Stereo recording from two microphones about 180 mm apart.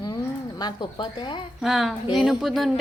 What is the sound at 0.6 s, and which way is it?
Speech, 25° left (ahead or behind).